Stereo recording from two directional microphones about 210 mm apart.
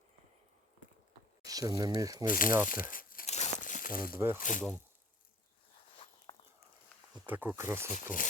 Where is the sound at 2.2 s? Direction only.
40° left (ahead or behind).